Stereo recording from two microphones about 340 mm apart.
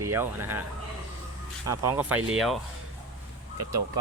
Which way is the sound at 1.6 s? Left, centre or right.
Centre.